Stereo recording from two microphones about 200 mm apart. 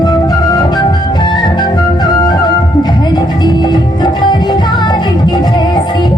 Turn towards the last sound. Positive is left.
turn(degrees=20)  # may be behind; listen again after turning